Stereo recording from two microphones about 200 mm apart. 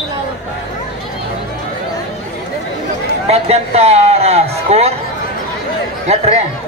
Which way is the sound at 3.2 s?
30° right (ahead or behind).